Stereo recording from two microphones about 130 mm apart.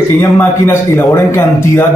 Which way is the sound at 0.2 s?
15° left (ahead or behind).